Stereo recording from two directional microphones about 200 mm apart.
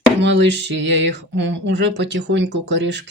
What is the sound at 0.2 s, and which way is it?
Speech, 60° right (ahead or behind).